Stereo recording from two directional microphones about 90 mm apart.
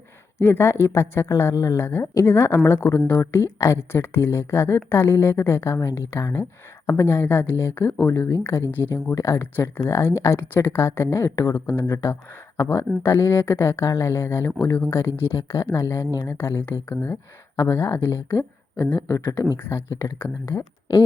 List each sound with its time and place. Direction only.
0.3 s speech: 30° left (ahead or behind)
9.1 s speech: 35° left (ahead or behind)